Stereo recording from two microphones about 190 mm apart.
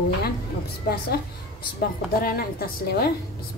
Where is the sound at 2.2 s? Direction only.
50° left (ahead or behind).